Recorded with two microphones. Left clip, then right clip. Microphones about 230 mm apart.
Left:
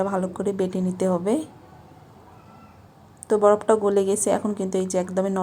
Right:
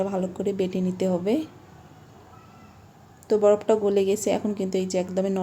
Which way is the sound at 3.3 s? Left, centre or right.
Centre.